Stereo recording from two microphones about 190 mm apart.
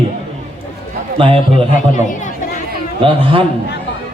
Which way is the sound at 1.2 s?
30° right (ahead or behind).